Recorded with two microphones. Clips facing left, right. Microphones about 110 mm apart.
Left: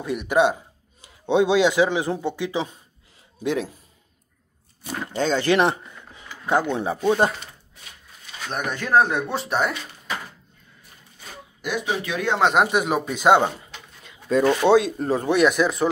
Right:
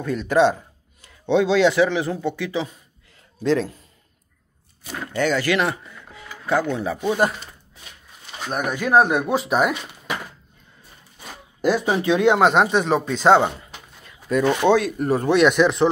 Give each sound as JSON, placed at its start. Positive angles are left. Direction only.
{"t": 0.0, "sound": "speech", "side_deg": 15}
{"t": 5.1, "sound": "speech", "side_deg": 25}
{"t": 8.5, "sound": "speech", "side_deg": -5}
{"t": 11.6, "sound": "speech", "side_deg": -40}
{"t": 12.4, "sound": "speech", "side_deg": 0}
{"t": 12.7, "sound": "speech", "side_deg": 10}
{"t": 13.6, "sound": "a sound", "side_deg": 25}
{"t": 14.8, "sound": "speech", "side_deg": 25}
{"t": 15.2, "sound": "speech", "side_deg": 5}